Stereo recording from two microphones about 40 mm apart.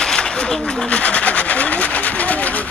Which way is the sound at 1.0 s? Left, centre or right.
Left.